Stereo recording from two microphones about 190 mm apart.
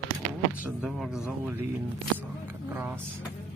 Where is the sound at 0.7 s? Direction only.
5° right (ahead or behind).